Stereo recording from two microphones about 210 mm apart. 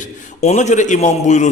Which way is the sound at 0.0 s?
35° left (ahead or behind).